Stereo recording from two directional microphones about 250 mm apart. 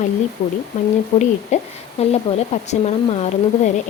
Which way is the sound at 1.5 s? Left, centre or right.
Left.